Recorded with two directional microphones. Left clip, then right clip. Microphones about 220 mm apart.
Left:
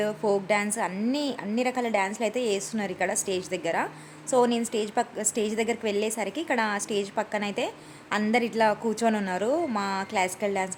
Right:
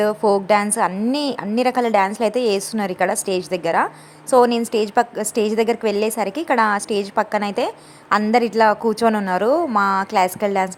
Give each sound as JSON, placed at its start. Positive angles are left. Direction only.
{"t": 0.0, "sound": "a woman's voice", "side_deg": -20}